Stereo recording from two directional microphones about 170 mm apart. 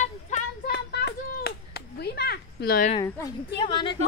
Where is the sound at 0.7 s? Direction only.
70° left (ahead or behind).